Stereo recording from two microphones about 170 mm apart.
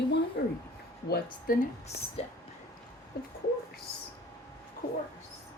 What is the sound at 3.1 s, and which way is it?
Speech, 70° left (ahead or behind).